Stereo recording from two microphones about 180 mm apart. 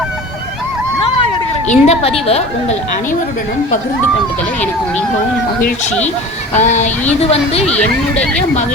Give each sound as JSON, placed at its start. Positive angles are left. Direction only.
{"t": 1.6, "sound": "a woman's voice", "side_deg": 40}
{"t": 6.5, "sound": "a woman's voice", "side_deg": 40}
{"t": 7.6, "sound": "speech", "side_deg": 5}